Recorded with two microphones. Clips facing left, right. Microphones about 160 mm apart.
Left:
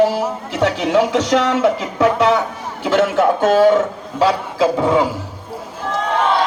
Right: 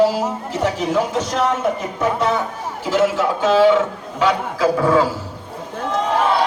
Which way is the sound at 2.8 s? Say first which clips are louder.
Left 3 dB; 60° left (ahead or behind).